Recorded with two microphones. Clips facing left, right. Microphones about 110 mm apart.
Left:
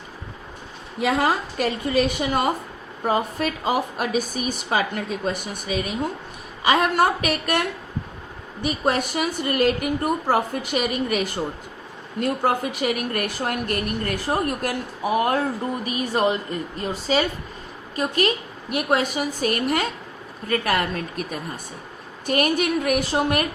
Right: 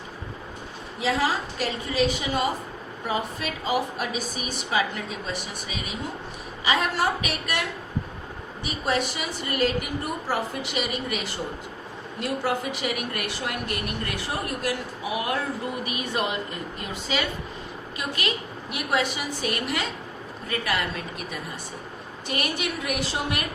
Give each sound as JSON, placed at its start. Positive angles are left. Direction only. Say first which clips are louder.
{"t": 0.9, "sound": "speech", "louder": "left 4 dB", "side_deg": 55}
{"t": 8.6, "sound": "a woman's voice", "louder": "left 4 dB", "side_deg": 45}